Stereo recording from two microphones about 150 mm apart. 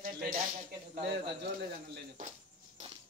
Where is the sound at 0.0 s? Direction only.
65° right (ahead or behind).